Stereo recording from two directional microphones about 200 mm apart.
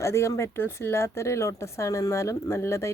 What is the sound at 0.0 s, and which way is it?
Speech, 15° left (ahead or behind).